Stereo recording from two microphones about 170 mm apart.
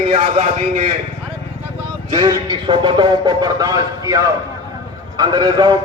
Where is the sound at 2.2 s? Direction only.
25° right (ahead or behind).